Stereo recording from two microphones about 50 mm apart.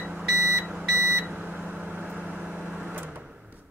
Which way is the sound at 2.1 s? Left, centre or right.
Right.